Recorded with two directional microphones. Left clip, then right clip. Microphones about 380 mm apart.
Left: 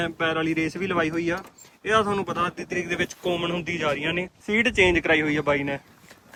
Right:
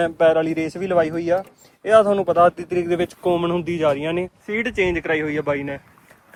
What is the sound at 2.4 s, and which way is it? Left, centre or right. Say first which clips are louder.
Speech: right 10 dB; centre.